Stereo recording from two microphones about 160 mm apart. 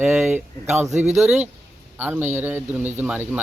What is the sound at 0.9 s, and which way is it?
Speech, 45° right (ahead or behind).